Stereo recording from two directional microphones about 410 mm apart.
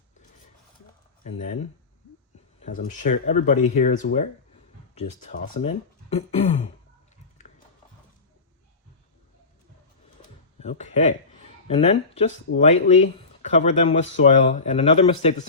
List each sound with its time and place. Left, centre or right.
1.2 s speech: centre
2.6 s speech: centre
10.6 s speech: centre